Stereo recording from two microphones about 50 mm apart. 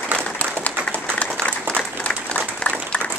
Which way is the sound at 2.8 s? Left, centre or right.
Left.